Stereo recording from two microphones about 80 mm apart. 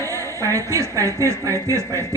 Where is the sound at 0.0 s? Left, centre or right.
Right.